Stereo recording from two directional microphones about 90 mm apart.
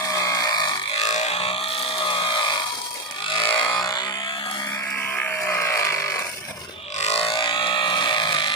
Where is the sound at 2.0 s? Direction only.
65° left (ahead or behind).